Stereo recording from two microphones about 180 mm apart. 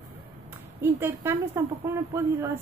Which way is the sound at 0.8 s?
15° right (ahead or behind).